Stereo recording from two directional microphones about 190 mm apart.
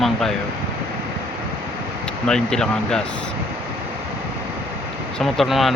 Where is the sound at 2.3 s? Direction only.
5° left (ahead or behind).